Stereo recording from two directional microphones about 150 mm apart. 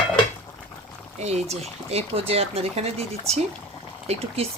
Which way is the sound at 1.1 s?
45° right (ahead or behind).